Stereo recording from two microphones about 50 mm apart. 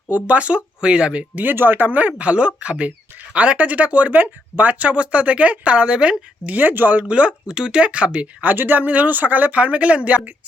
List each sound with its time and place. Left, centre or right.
0.1 s speech: right
1.4 s speech: right
6.5 s speech: right
7.1 s speech: right
8.5 s speech: right